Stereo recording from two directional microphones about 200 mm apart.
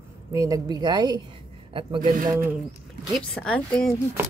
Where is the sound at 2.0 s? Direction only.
40° right (ahead or behind).